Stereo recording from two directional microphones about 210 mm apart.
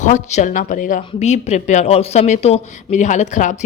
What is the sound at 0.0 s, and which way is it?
A woman's voice, 35° left (ahead or behind).